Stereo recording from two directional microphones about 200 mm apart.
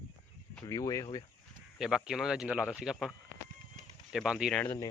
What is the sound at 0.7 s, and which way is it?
Speech, 15° left (ahead or behind).